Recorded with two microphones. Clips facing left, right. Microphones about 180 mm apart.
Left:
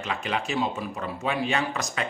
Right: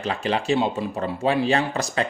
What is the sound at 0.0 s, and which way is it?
Speech, 35° right (ahead or behind).